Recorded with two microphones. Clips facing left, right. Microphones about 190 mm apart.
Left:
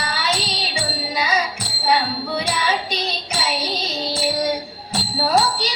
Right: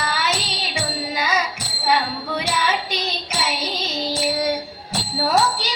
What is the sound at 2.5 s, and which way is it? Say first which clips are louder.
Child singing: even; 35° left (ahead or behind).